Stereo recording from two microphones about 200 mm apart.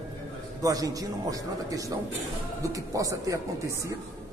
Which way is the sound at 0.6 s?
15° right (ahead or behind).